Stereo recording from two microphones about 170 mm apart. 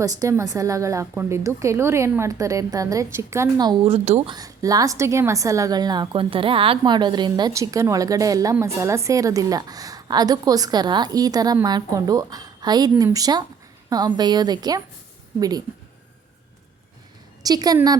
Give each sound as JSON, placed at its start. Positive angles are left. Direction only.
{"t": 0.0, "sound": "a woman's voice", "side_deg": -20}
{"t": 4.3, "sound": "a woman's voice", "side_deg": -20}
{"t": 17.4, "sound": "a woman's voice", "side_deg": -20}